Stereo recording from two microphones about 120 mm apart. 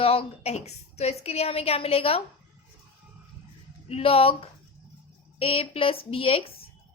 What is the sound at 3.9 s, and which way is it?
A woman's voice, 55° left (ahead or behind).